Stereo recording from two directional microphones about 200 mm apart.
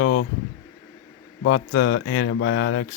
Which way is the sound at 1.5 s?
60° left (ahead or behind).